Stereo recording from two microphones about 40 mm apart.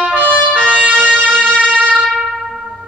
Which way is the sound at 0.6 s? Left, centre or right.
Right.